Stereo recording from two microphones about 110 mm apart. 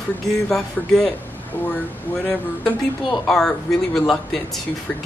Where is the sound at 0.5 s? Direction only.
5° left (ahead or behind).